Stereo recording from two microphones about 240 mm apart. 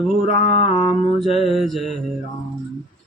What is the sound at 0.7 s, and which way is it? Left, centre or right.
Mantra, left.